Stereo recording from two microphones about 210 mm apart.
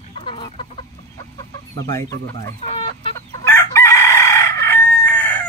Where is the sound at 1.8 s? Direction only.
15° left (ahead or behind).